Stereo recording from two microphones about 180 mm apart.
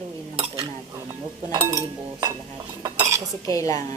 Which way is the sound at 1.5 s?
20° right (ahead or behind).